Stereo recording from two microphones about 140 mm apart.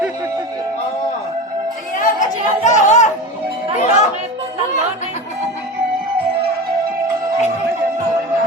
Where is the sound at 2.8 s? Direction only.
60° left (ahead or behind).